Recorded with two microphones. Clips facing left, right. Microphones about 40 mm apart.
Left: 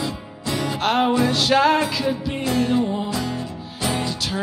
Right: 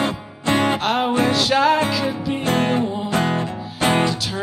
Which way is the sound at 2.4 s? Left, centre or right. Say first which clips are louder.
Even; right.